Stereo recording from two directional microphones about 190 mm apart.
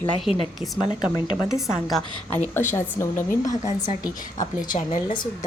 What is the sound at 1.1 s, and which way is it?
Speech, 15° left (ahead or behind).